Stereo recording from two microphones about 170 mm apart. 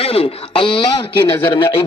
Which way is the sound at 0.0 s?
35° left (ahead or behind).